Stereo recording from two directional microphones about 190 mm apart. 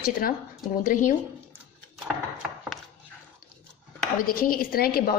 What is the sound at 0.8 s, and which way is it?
Speech, 45° left (ahead or behind).